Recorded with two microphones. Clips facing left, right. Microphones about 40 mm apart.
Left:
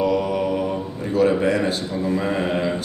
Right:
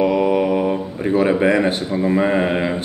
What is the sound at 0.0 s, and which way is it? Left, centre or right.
Mantra, right.